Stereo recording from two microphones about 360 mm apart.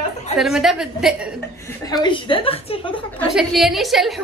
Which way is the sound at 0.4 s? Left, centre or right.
Centre.